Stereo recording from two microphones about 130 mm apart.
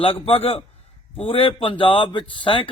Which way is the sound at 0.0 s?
45° left (ahead or behind).